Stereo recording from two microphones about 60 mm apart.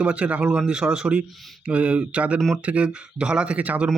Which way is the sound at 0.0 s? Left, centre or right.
Right.